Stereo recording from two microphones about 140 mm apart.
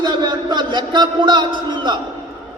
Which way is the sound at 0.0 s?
30° right (ahead or behind).